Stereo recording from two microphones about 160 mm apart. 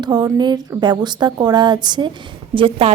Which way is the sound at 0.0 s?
25° right (ahead or behind).